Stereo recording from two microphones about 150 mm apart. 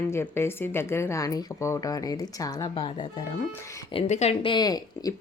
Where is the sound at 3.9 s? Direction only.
45° left (ahead or behind); by 5.1 s 25° left (ahead or behind).